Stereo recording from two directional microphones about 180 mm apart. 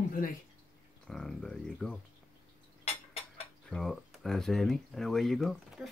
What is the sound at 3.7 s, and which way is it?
Speech, centre (ahead or behind).